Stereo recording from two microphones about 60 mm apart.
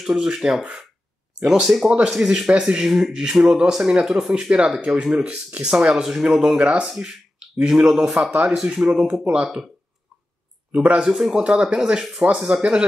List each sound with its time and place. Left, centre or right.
0.0 s speech: centre
6.6 s speech: right
6.9 s speech: centre
8.3 s speech: right
10.7 s speech: centre
11.1 s speech: centre
12.5 s speech: centre